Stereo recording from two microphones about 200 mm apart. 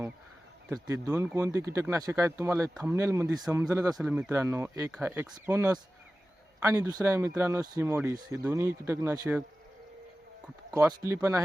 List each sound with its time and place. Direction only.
0.7 s speech: 15° right (ahead or behind)
3.9 s speech: 5° right (ahead or behind)
10.7 s speech: 20° right (ahead or behind)